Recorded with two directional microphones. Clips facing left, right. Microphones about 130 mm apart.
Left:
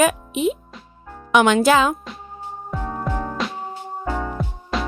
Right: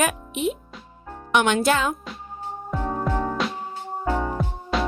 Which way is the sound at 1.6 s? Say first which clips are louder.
Left 5 dB; 90° left.